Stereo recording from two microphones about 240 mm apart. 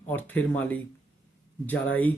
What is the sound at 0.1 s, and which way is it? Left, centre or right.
Speech, centre.